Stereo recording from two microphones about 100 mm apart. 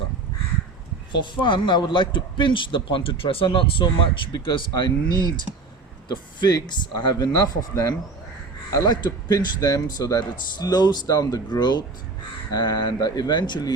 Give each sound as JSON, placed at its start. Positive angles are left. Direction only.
{"t": 1.4, "sound": "a man's voice", "side_deg": 50}